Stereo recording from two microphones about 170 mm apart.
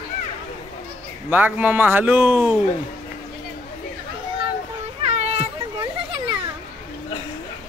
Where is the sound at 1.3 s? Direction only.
10° right (ahead or behind).